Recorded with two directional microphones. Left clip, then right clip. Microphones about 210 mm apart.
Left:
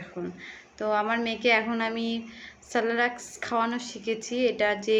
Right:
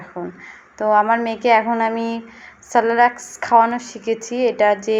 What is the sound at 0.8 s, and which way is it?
Speech, 15° left (ahead or behind).